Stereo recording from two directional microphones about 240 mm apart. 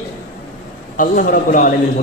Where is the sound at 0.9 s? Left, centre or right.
Left.